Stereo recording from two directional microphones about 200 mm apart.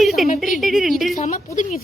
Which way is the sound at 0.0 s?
Centre (ahead or behind).